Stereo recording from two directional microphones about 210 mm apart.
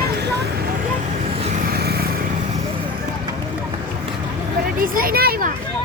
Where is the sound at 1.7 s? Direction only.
50° right (ahead or behind).